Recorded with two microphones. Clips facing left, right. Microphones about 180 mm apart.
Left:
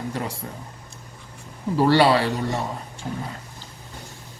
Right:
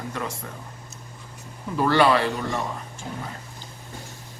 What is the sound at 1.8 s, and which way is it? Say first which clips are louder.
Speech: left 2 dB; 30° left (ahead or behind).